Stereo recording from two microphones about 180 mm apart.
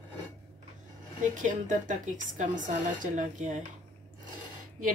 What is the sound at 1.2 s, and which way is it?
A woman's voice, 45° right (ahead or behind).